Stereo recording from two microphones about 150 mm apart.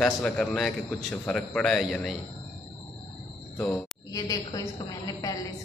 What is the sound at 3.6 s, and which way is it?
Speech, 5° left (ahead or behind).